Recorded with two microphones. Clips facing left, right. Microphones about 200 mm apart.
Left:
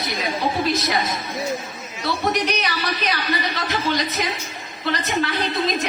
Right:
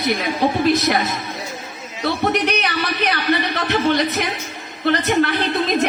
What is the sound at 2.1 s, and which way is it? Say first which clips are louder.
A woman's voice: right 3 dB; 60° right (ahead or behind).